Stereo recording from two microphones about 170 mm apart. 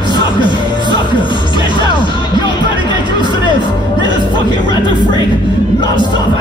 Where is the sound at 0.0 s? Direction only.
25° left (ahead or behind).